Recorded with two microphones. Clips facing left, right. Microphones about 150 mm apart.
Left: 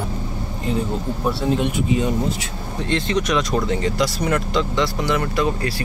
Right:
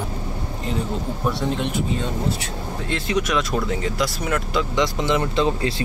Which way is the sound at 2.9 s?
5° right (ahead or behind).